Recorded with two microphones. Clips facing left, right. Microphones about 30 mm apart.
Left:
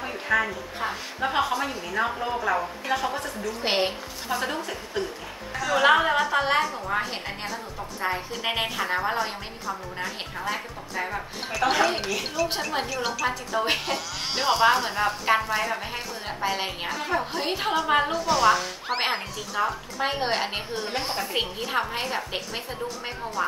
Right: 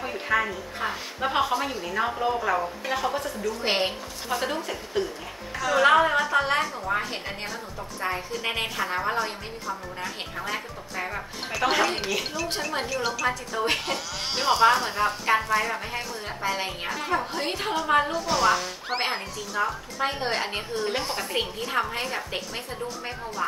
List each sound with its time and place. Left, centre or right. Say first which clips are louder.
0.0 s a woman's voice: left 1 dB; centre
18.1 s speech: left 2 dB; centre
20.0 s a woman's voice: left 1 dB; centre
20.7 s speech: right 1 dB; centre